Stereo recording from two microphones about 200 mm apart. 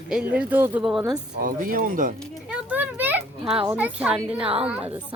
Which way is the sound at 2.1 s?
5° right (ahead or behind).